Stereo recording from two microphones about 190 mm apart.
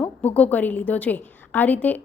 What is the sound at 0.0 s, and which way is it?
A woman's voice, 5° left (ahead or behind).